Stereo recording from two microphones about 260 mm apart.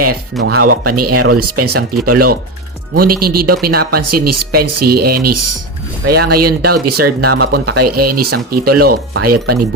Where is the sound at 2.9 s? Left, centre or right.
Right.